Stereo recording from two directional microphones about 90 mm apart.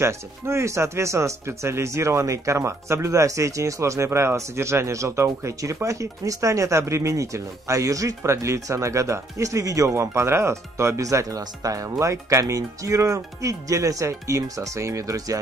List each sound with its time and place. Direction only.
0.0 s speech: 30° right (ahead or behind)